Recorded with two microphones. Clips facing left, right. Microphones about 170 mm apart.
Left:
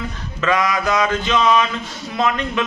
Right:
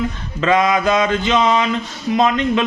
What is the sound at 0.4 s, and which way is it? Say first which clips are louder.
A man's voice: right 4 dB; 25° right (ahead or behind).